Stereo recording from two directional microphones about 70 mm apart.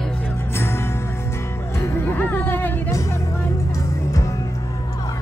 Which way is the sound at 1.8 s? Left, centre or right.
Left.